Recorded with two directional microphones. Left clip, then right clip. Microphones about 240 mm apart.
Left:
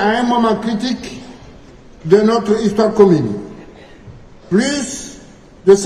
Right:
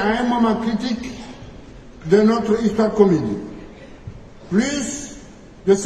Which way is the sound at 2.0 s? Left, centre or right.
Left.